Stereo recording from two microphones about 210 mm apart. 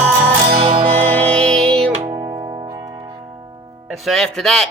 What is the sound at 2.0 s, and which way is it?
Music, 20° right (ahead or behind).